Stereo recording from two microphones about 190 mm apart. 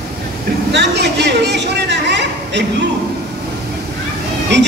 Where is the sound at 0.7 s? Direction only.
65° right (ahead or behind).